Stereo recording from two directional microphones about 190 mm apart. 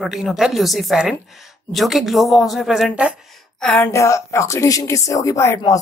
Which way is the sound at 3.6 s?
5° left (ahead or behind).